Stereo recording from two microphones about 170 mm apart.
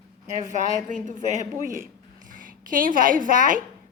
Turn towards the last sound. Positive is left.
turn(degrees=-50)  # may be behind; listen again after turning